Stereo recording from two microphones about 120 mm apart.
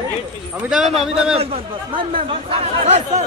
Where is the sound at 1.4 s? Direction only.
55° right (ahead or behind).